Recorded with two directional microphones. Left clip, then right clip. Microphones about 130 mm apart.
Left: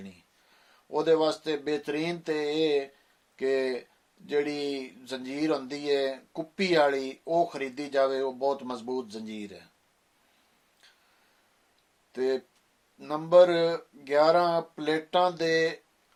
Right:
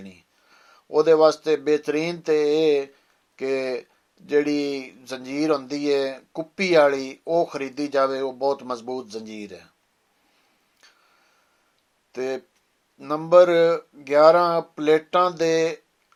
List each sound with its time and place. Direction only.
0.9 s speech: 50° right (ahead or behind)
12.1 s speech: 50° right (ahead or behind)